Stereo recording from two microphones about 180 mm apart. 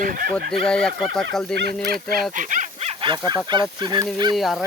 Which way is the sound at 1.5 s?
60° right (ahead or behind).